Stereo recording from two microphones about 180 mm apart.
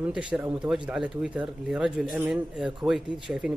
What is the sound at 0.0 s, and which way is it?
Speech, 5° right (ahead or behind).